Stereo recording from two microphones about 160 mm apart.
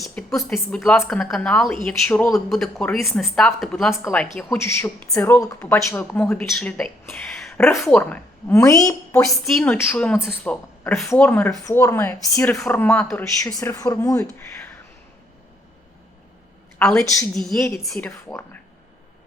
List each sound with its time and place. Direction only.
0.0 s speech: centre (ahead or behind)
7.1 s a sound: 5° left (ahead or behind)
7.8 s a woman's voice: 10° left (ahead or behind)
13.6 s a woman's voice: 20° left (ahead or behind)
16.7 s a woman's voice: 5° left (ahead or behind)
18.1 s speech: 15° left (ahead or behind)